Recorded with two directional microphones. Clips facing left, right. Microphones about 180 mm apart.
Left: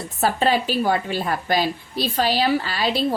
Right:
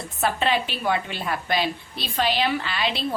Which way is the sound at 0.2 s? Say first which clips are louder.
Left 3 dB; 40° left (ahead or behind).